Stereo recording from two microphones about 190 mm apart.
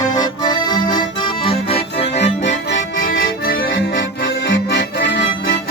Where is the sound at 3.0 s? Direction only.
50° left (ahead or behind).